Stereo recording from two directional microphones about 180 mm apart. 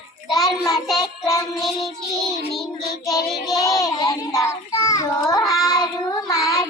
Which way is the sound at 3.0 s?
20° left (ahead or behind).